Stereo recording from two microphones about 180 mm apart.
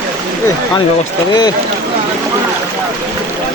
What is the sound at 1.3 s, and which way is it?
Speech, 20° left (ahead or behind).